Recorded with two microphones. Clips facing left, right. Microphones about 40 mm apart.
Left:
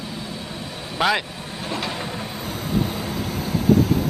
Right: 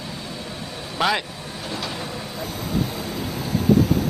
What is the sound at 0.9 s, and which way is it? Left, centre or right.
Speech, centre.